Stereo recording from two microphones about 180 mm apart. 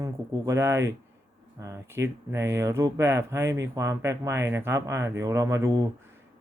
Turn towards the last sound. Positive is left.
turn(degrees=-20)  # may be behind; listen again after turning